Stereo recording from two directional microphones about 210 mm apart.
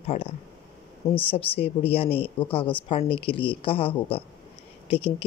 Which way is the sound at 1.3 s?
25° left (ahead or behind).